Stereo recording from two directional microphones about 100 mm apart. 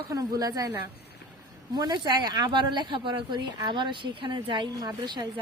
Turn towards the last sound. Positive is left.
turn(degrees=-45)  # may be behind; listen again after turning